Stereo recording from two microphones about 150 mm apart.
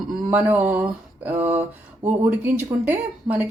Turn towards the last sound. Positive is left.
turn(degrees=-10)  # may be behind; listen again after turning